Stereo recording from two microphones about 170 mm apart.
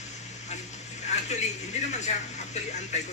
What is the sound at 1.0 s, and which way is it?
Speech, 45° left (ahead or behind).